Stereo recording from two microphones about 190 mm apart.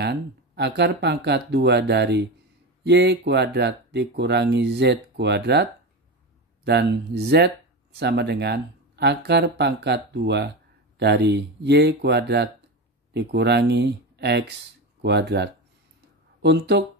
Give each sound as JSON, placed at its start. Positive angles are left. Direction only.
{"t": 0.0, "sound": "speech", "side_deg": -65}